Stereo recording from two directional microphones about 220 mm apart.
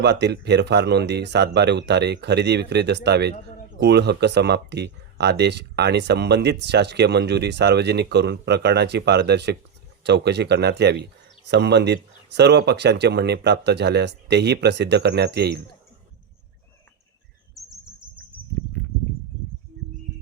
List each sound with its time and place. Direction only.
0.0 s speech: 50° right (ahead or behind)
17.5 s chirp: centre (ahead or behind)